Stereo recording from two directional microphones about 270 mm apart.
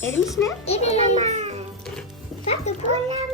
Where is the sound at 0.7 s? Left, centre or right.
Left.